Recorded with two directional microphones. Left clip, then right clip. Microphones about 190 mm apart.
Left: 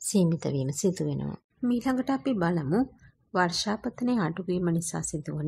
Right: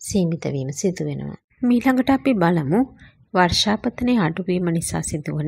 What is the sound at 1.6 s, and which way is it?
Speech, 15° right (ahead or behind).